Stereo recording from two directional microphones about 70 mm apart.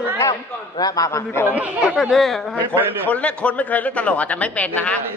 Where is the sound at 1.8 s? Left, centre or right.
Centre.